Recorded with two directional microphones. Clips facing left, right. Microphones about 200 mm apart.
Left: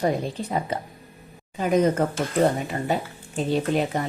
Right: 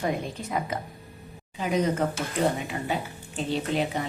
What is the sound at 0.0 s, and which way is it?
Speech, 30° left (ahead or behind).